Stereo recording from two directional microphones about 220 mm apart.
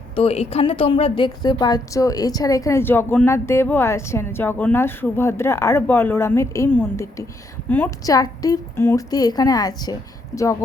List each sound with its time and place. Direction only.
0.2 s a woman's voice: 25° left (ahead or behind)